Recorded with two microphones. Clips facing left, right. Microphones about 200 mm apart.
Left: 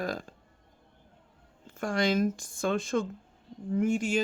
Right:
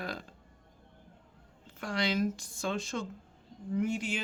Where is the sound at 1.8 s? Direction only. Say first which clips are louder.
Left 5 dB; 50° left (ahead or behind).